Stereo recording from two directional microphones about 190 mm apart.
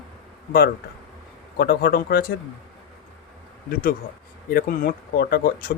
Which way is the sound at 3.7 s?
50° left (ahead or behind).